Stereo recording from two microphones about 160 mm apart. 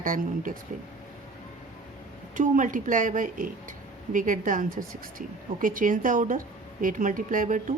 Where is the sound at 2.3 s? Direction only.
55° right (ahead or behind).